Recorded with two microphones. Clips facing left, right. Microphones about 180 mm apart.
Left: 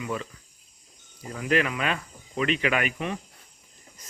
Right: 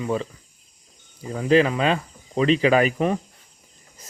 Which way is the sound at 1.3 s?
30° right (ahead or behind).